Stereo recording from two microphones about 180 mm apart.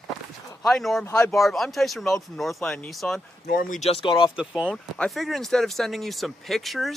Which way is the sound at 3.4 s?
55° left (ahead or behind).